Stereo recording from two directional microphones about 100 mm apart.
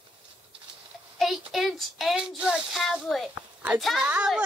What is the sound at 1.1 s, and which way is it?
Speech, centre (ahead or behind).